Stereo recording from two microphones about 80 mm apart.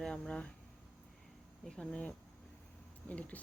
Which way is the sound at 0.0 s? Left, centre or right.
Centre.